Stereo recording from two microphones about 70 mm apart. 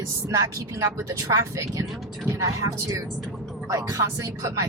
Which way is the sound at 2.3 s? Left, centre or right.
Right.